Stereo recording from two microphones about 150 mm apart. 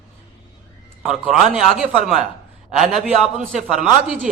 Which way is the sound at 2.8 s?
60° right (ahead or behind).